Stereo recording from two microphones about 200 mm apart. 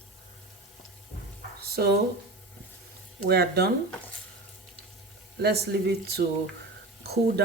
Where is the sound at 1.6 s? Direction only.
50° right (ahead or behind).